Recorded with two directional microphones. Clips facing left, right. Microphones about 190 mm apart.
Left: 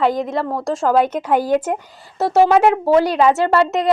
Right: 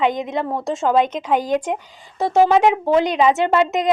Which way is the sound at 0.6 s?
Centre (ahead or behind).